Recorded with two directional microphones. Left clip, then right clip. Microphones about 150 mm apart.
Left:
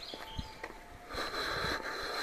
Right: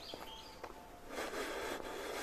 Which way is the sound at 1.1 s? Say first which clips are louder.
Left 6 dB; 50° right (ahead or behind).